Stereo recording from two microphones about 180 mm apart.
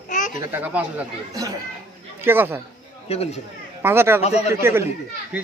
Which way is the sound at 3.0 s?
35° left (ahead or behind).